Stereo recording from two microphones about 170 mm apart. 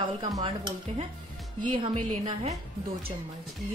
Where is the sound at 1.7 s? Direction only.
30° right (ahead or behind).